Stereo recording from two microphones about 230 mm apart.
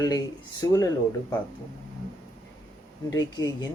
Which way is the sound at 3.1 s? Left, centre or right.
Centre.